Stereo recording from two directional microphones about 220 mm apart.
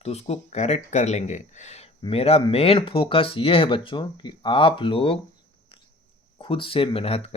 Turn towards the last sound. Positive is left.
turn(degrees=25)  # may be behind; listen again after turning